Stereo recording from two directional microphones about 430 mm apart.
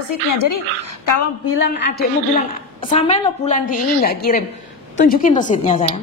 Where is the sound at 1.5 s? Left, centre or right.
Left.